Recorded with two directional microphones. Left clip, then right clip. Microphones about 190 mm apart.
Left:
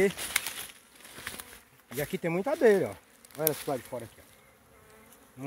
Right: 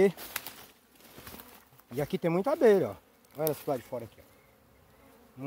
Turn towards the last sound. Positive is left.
turn(degrees=5)  # may be behind; listen again after turning